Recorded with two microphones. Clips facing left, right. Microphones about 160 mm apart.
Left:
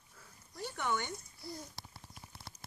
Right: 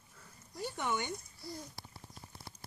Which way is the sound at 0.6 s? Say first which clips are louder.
Even; 15° right (ahead or behind).